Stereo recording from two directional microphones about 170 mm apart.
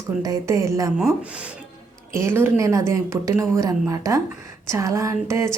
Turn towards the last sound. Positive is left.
turn(degrees=-15)  # may be behind; listen again after turning